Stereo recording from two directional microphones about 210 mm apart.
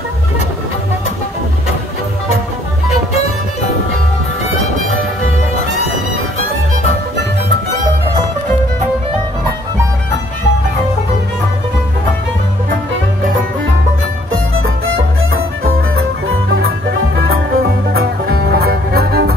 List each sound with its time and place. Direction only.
14.3 s music: 75° right (ahead or behind)
16.3 s music: 65° right (ahead or behind); by 19.3 s 50° right (ahead or behind)